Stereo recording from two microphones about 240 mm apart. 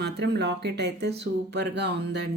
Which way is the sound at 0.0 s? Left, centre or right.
Right.